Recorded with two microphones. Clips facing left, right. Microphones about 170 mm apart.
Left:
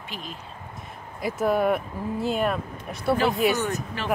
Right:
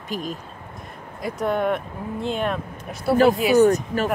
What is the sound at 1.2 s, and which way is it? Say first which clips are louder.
Speech: even; 5° left (ahead or behind).